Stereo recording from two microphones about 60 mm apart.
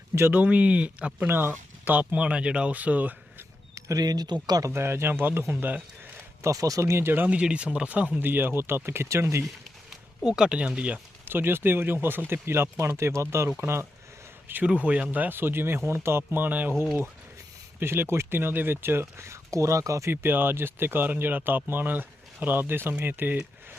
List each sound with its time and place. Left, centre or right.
0.2 s speech: right
1.3 s speech: right
3.8 s speech: right
4.7 s speech: right
6.4 s speech: right
7.3 s speech: centre
8.2 s speech: right
10.2 s speech: centre
11.3 s speech: right
14.6 s speech: right
17.7 s speech: right
20.1 s speech: right